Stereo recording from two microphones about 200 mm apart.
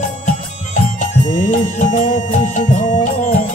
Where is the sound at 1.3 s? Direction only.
40° left (ahead or behind).